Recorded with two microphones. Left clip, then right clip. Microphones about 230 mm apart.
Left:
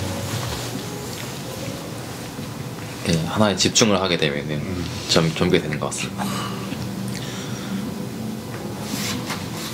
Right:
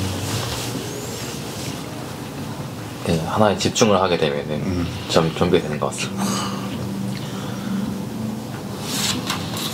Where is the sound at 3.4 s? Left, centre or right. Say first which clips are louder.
Right 1 dB; left.